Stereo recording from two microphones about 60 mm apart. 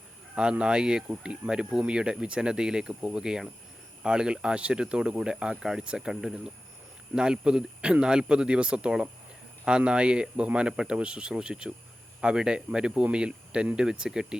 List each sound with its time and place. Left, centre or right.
0.3 s speech: centre